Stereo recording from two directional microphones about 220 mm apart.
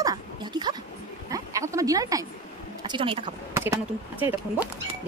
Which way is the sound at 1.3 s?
15° right (ahead or behind).